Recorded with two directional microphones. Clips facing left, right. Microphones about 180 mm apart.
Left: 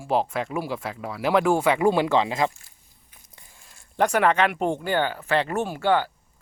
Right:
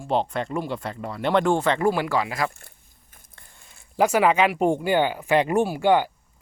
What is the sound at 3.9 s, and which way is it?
Speech, 5° right (ahead or behind).